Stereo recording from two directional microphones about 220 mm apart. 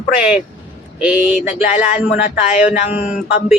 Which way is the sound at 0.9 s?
5° right (ahead or behind).